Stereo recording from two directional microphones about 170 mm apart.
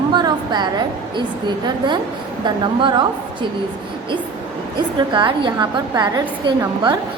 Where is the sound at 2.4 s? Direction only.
25° right (ahead or behind).